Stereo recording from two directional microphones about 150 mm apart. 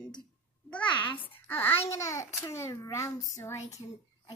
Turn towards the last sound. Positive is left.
turn(degrees=20)  # may be behind; listen again after turning